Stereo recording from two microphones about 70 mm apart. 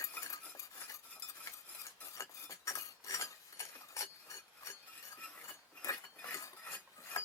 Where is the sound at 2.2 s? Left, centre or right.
Left.